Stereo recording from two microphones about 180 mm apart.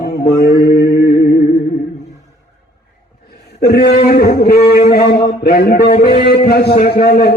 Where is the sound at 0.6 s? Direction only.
60° left (ahead or behind).